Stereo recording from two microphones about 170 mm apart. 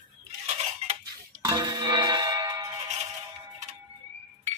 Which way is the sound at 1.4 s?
25° right (ahead or behind).